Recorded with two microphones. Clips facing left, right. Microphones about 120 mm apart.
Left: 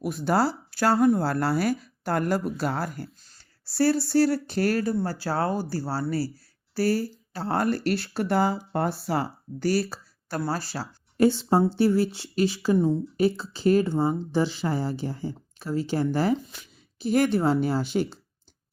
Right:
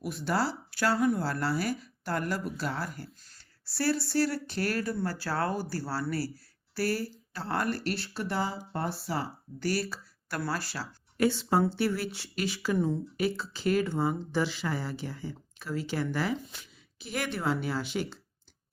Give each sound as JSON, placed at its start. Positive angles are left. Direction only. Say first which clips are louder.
{"t": 0.0, "sound": "speech", "louder": "left 6 dB", "side_deg": 45}